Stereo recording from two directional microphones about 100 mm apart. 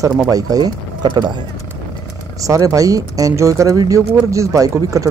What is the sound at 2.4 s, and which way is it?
Speech, 35° right (ahead or behind).